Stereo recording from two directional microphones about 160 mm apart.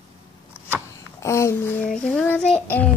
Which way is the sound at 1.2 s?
15° left (ahead or behind).